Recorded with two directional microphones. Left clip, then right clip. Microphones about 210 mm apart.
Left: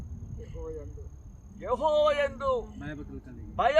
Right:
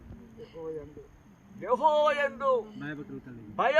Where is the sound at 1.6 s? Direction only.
15° right (ahead or behind).